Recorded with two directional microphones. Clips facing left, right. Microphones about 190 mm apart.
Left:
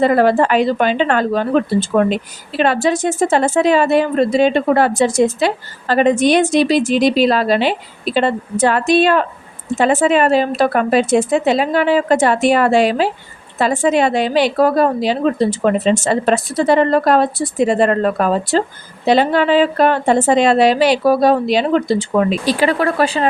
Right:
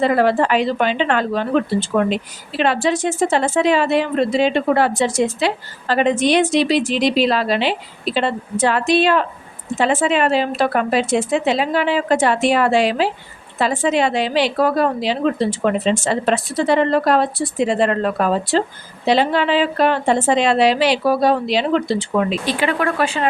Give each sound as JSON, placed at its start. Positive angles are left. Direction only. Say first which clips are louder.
{"t": 0.0, "sound": "speech", "louder": "left 3 dB", "side_deg": 45}